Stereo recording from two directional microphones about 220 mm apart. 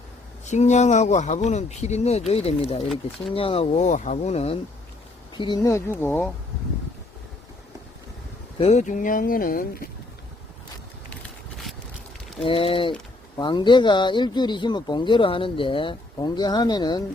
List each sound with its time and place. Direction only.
0.4 s speech: 30° left (ahead or behind); by 6.3 s 10° left (ahead or behind)
8.5 s speech: 30° left (ahead or behind)
12.4 s speech: 25° left (ahead or behind)